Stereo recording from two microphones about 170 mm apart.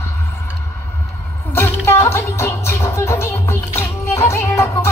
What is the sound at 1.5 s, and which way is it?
Music, 15° left (ahead or behind).